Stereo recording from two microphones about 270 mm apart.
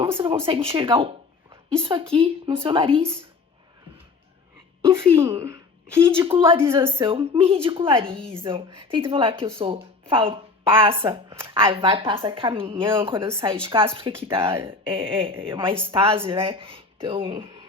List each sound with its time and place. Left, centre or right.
0.0 s speech: centre
4.9 s a woman's voice: centre